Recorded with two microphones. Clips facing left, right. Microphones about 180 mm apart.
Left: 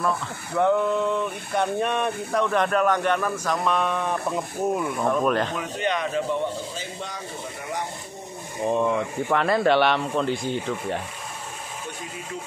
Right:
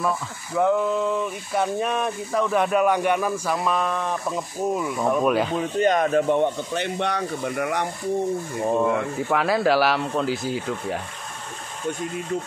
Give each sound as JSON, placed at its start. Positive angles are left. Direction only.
{"t": 0.6, "sound": "speech", "side_deg": -5}
{"t": 5.6, "sound": "speech", "side_deg": -45}
{"t": 9.3, "sound": "speech", "side_deg": -5}